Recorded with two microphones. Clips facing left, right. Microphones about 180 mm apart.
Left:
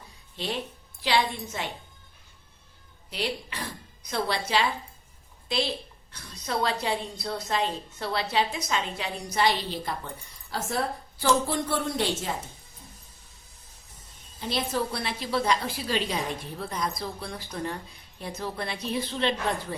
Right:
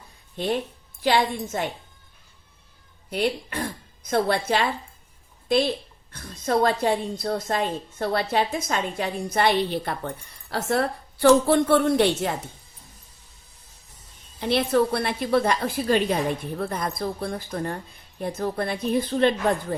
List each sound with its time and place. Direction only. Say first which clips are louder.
0.3 s a woman's voice: right 7 dB; 50° right (ahead or behind)
3.1 s a woman's voice: right 7 dB; 50° right (ahead or behind)
14.4 s a woman's voice: right 8 dB; 60° right (ahead or behind)